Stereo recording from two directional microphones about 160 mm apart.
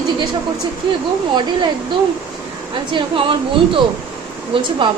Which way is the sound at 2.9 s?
35° right (ahead or behind).